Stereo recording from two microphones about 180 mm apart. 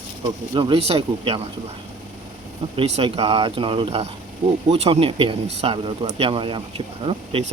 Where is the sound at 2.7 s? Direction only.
35° right (ahead or behind).